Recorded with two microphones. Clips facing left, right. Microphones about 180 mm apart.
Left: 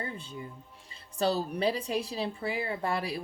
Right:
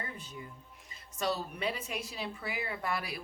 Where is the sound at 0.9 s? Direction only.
30° left (ahead or behind).